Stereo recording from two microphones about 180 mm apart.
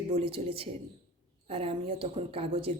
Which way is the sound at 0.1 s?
30° right (ahead or behind).